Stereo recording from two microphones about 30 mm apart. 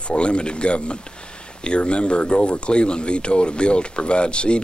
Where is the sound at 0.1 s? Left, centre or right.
Left.